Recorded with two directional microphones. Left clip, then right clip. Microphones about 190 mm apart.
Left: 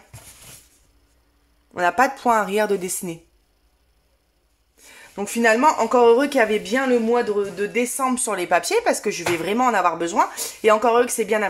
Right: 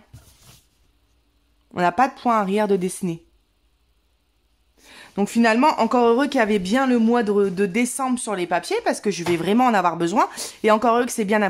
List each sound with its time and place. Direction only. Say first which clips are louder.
1.7 s speech: left 1 dB; 30° right (ahead or behind)
4.8 s speech: right 4 dB; 25° right (ahead or behind)